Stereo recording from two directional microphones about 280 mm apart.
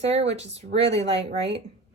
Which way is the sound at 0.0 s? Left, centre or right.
Right.